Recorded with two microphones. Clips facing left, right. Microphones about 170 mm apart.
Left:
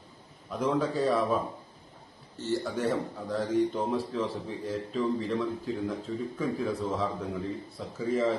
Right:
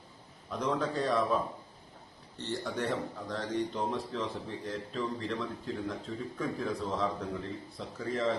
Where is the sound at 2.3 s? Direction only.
5° left (ahead or behind).